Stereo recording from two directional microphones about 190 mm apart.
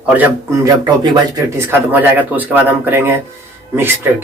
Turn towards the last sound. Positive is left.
turn(degrees=-10)  # may be behind; listen again after turning